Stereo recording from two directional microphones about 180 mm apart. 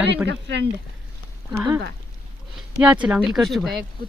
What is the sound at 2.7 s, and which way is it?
Speech, 5° right (ahead or behind).